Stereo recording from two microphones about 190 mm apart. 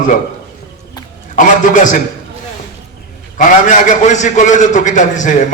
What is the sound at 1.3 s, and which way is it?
Speech, 40° left (ahead or behind).